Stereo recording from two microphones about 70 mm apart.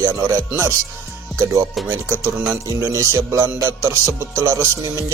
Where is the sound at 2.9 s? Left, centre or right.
Right.